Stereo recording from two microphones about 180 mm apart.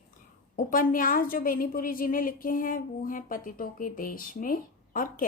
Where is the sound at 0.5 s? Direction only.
50° left (ahead or behind).